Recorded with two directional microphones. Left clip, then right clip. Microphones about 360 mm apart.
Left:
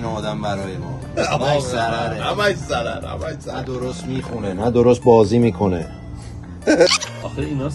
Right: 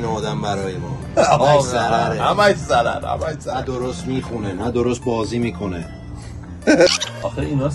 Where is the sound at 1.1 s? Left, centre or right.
Centre.